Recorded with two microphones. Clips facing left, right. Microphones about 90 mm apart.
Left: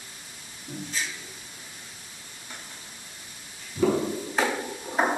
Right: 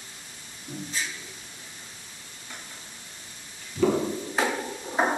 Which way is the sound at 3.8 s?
15° left (ahead or behind).